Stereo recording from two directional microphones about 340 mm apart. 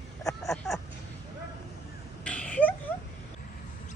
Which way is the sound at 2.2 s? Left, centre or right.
Centre.